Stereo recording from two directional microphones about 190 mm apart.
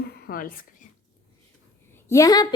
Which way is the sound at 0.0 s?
55° left (ahead or behind).